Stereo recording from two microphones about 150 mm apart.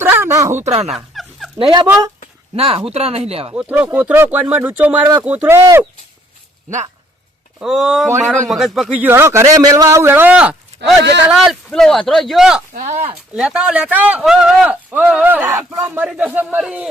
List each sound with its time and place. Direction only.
0.0 s a sound: 15° right (ahead or behind)
0.3 s speech: 20° right (ahead or behind)
0.6 s speech: 45° right (ahead or behind)
0.9 s a sound: centre (ahead or behind)
2.6 s speech: 40° right (ahead or behind)
3.5 s speech: 10° right (ahead or behind)
7.6 s a man's voice: centre (ahead or behind)
9.0 s speech: 15° right (ahead or behind)
12.7 s speech: 55° right (ahead or behind)
13.3 s speech: 5° right (ahead or behind)